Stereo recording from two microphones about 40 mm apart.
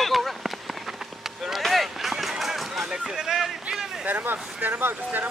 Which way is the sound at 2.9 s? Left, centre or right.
Centre.